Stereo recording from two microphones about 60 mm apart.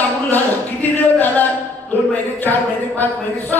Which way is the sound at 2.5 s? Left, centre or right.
Left.